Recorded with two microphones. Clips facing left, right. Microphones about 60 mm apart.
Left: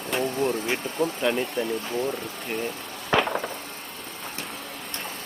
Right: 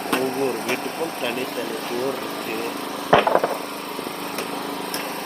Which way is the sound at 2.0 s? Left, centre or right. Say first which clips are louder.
Right 3 dB; right.